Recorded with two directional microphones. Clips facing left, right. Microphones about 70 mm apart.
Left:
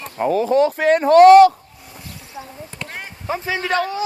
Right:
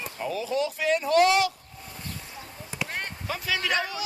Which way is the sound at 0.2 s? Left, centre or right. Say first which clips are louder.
Left 12 dB; left.